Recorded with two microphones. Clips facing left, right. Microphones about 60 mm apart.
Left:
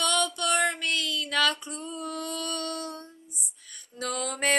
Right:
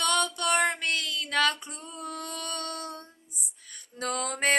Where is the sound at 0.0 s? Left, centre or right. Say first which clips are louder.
Even; right.